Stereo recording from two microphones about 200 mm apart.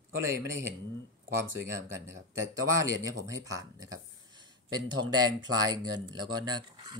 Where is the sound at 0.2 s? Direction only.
15° right (ahead or behind).